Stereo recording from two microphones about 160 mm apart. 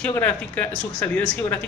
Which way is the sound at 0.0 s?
10° left (ahead or behind).